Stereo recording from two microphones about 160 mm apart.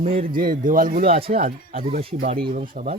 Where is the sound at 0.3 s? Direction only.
65° right (ahead or behind).